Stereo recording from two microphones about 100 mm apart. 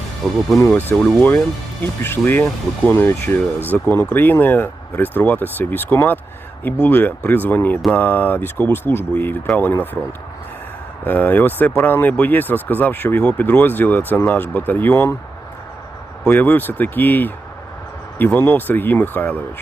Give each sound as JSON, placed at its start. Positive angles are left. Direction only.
{"t": 0.2, "sound": "speech", "side_deg": 0}
{"t": 0.9, "sound": "speech", "side_deg": 20}
{"t": 11.0, "sound": "speech", "side_deg": 20}
{"t": 16.3, "sound": "speech", "side_deg": 20}